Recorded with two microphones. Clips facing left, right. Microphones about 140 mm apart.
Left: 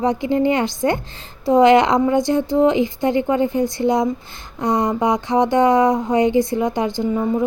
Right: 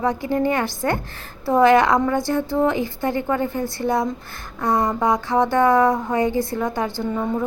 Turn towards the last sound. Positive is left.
turn(degrees=15)  # may be behind; listen again after turning